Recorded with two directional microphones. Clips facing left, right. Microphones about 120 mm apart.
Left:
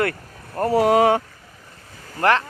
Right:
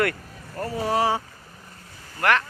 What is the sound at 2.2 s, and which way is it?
Speech, 30° left (ahead or behind).